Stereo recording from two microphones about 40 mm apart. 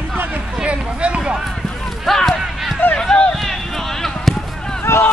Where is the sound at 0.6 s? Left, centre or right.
Right.